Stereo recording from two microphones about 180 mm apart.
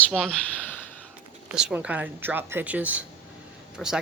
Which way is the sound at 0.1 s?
5° left (ahead or behind).